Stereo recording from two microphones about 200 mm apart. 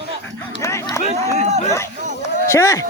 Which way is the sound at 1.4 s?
35° right (ahead or behind).